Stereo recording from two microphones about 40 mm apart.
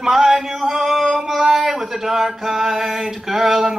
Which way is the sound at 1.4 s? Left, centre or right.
Centre.